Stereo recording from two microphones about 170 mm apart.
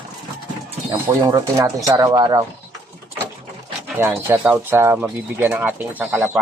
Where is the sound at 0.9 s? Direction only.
20° right (ahead or behind).